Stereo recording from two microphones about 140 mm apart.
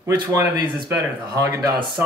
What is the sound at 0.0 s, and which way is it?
Speech, 20° right (ahead or behind).